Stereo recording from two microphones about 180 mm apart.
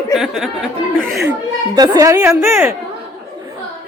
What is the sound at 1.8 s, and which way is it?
Speech, 15° right (ahead or behind).